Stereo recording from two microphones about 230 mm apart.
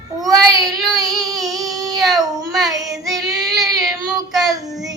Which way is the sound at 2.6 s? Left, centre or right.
Centre.